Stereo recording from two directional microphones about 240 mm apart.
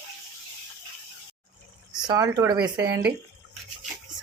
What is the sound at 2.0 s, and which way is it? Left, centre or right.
Speech, centre.